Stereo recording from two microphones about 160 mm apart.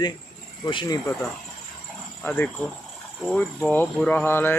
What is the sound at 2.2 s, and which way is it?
Speech, 10° left (ahead or behind).